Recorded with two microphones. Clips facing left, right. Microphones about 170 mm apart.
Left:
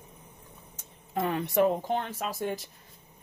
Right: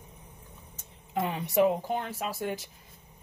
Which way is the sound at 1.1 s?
15° right (ahead or behind).